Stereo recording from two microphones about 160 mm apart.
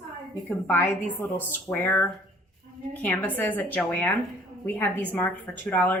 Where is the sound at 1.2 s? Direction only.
10° left (ahead or behind).